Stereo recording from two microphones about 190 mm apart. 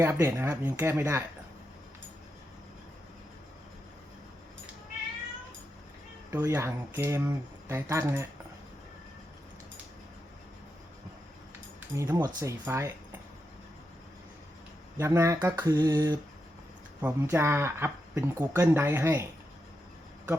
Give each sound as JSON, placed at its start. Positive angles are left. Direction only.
{"t": 0.0, "sound": "speech", "side_deg": -15}
{"t": 6.3, "sound": "speech", "side_deg": -15}
{"t": 11.9, "sound": "speech", "side_deg": -15}
{"t": 14.9, "sound": "speech", "side_deg": -15}